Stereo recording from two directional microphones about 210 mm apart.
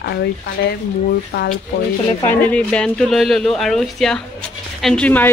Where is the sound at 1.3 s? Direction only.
50° left (ahead or behind).